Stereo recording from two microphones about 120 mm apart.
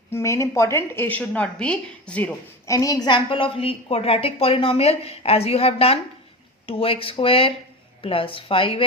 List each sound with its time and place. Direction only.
0.1 s a woman's voice: 25° left (ahead or behind)
2.6 s a woman's voice: 30° left (ahead or behind); by 8.9 s 50° left (ahead or behind)